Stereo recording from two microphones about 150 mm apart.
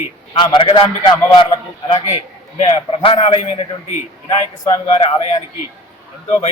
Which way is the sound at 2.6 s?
40° left (ahead or behind).